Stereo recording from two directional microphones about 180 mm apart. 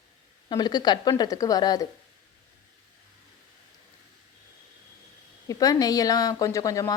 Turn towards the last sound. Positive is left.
turn(degrees=20)  # may be behind; listen again after turning